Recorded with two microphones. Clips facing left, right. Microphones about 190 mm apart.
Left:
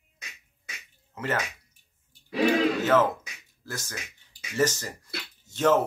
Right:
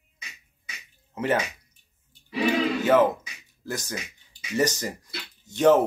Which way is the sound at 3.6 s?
15° right (ahead or behind).